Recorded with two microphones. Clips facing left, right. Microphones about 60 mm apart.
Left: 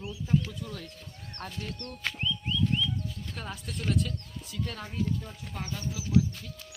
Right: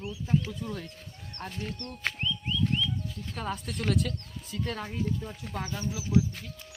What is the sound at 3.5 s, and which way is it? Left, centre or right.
Speech, right.